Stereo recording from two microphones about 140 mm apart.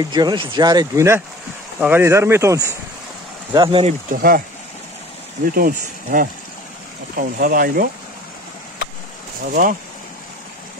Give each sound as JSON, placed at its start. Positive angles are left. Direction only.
{"t": 0.0, "sound": "speech", "side_deg": -30}
{"t": 3.5, "sound": "speech", "side_deg": -35}
{"t": 4.1, "sound": "speech", "side_deg": -90}
{"t": 5.4, "sound": "speech", "side_deg": -90}
{"t": 7.2, "sound": "speech", "side_deg": -85}
{"t": 9.5, "sound": "speech", "side_deg": -70}